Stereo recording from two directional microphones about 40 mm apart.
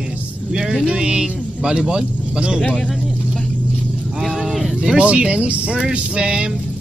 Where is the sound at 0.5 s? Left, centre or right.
Centre.